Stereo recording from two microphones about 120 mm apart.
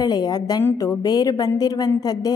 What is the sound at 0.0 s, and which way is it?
A woman's voice, 35° left (ahead or behind).